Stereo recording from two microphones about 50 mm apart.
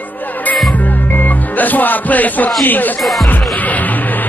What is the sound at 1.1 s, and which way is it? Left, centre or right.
Speech, left.